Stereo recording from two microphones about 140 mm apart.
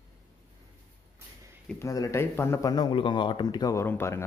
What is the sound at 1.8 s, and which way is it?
Speech, 20° left (ahead or behind).